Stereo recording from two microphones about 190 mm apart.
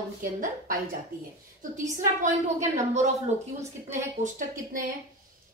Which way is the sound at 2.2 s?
35° right (ahead or behind).